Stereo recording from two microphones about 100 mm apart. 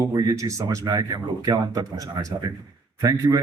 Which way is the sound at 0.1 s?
40° right (ahead or behind).